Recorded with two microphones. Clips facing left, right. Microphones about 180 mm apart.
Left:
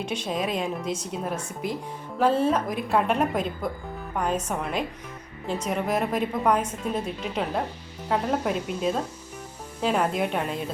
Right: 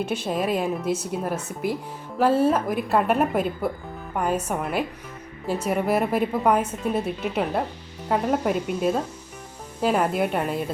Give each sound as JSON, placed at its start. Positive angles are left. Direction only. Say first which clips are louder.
{"t": 0.0, "sound": "a woman's voice", "louder": "right 3 dB", "side_deg": -5}